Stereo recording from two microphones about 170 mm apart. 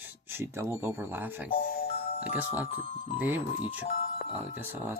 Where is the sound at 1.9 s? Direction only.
60° left (ahead or behind).